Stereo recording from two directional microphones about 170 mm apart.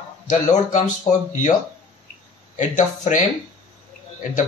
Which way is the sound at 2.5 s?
45° left (ahead or behind).